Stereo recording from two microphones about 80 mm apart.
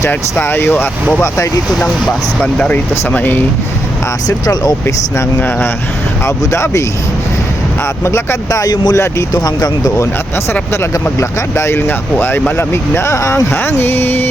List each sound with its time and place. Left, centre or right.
0.1 s speech: left
1.2 s speech: left
2.6 s speech: centre
4.3 s speech: left
5.4 s speech: left
6.4 s speech: left
8.0 s speech: left
8.4 s speech: left
11.2 s speech: left